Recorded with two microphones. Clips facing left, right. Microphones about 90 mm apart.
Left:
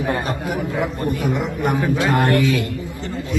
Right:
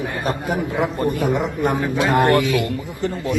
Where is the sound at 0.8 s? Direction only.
25° right (ahead or behind).